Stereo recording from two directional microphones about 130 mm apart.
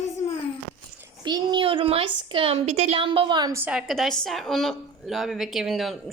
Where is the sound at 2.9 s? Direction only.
40° right (ahead or behind).